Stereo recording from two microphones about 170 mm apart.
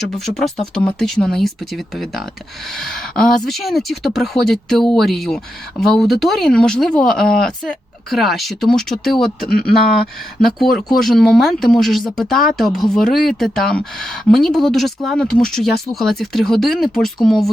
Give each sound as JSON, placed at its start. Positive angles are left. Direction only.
{"t": 0.0, "sound": "speech", "side_deg": 0}
{"t": 9.4, "sound": "speech", "side_deg": 60}
{"t": 10.6, "sound": "speech", "side_deg": 0}